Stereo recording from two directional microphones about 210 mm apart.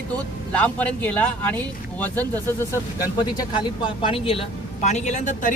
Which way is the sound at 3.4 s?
20° left (ahead or behind).